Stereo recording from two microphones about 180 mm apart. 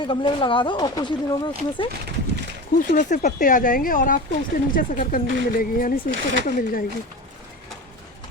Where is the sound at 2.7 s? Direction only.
45° left (ahead or behind).